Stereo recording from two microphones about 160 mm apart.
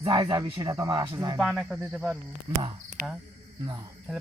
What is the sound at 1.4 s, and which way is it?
Speech, 5° right (ahead or behind).